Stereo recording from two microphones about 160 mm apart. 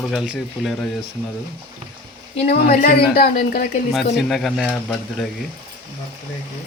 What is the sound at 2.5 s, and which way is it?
Speech, 65° left (ahead or behind).